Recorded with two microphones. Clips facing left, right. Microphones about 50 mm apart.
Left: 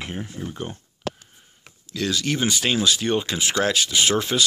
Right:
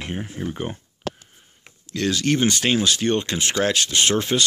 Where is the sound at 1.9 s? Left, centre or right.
Centre.